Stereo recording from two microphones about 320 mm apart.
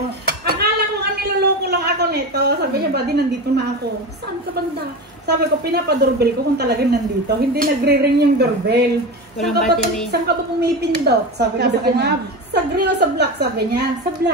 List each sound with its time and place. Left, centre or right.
0.6 s a sound: right
5.2 s a woman's voice: right
9.4 s speech: centre
10.2 s a woman's voice: right